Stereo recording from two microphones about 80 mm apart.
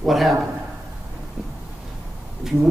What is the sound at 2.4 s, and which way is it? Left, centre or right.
Speech, centre.